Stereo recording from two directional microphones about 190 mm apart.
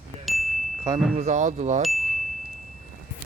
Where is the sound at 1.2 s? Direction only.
40° right (ahead or behind).